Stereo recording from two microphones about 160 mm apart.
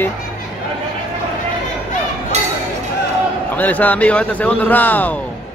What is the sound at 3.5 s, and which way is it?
Speech, 10° left (ahead or behind).